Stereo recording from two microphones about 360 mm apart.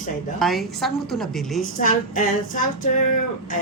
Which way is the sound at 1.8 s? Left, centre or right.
Left.